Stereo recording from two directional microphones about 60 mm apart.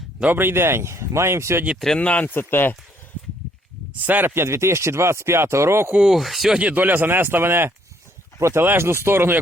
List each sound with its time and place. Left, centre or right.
0.3 s speech: right
2.0 s speech: left
2.3 s speech: left
4.0 s speech: right
4.4 s speech: right
6.0 s speech: centre
6.6 s speech: right
8.6 s speech: right